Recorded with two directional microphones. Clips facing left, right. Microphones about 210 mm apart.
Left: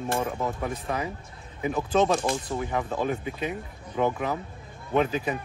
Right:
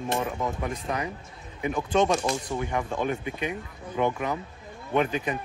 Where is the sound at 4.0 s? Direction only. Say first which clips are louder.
Left 1 dB; 5° left (ahead or behind).